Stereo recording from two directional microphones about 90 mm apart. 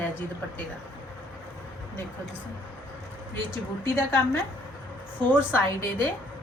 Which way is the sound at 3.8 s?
30° left (ahead or behind).